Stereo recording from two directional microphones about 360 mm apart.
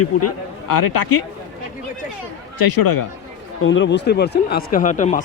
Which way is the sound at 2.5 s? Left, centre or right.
Left.